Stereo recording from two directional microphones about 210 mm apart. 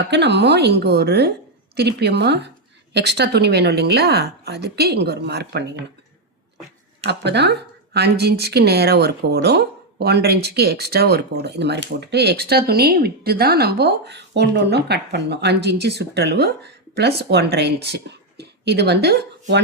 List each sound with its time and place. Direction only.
0.1 s speech: 55° right (ahead or behind)
7.1 s speech: 55° right (ahead or behind)